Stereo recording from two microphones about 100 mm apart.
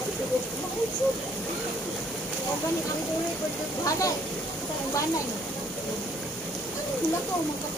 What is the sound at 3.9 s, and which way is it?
Speech, 35° left (ahead or behind).